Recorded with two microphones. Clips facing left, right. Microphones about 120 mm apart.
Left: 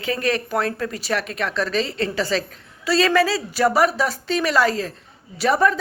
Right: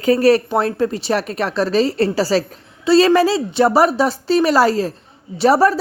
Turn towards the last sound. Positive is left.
turn(degrees=-35)  # may be behind; listen again after turning